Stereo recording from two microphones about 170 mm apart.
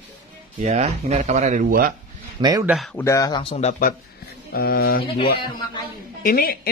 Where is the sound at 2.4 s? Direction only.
25° right (ahead or behind).